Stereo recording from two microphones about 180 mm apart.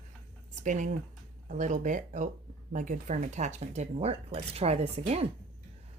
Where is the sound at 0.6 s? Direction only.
45° right (ahead or behind).